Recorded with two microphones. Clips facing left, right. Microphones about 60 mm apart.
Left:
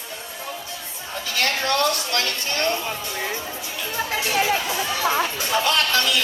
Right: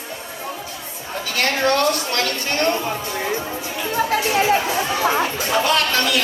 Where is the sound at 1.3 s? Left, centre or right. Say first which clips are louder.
Right 4 dB; right.